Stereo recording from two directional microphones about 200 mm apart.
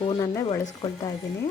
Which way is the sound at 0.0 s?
25° left (ahead or behind).